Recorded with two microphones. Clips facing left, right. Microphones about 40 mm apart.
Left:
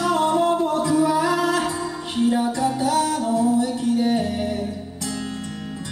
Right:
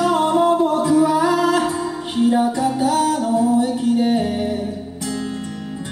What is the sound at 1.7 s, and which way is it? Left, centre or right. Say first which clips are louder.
Music: right 4 dB; centre.